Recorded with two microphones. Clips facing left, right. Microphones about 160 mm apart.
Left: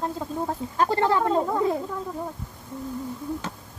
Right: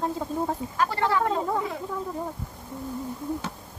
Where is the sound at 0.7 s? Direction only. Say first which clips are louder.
Left 5 dB; 25° left (ahead or behind).